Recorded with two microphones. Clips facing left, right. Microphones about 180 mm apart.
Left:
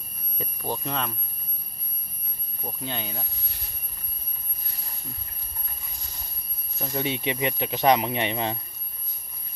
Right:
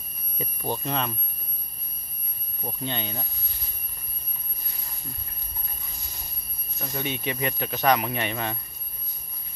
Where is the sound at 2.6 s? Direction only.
5° left (ahead or behind).